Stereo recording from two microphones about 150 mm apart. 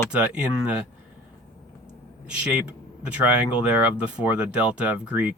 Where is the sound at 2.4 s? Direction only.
5° right (ahead or behind).